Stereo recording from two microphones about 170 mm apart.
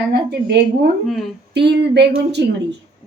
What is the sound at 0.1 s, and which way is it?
Speech, 70° right (ahead or behind).